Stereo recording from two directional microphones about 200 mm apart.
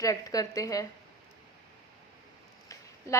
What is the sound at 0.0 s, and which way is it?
Speech, 15° left (ahead or behind).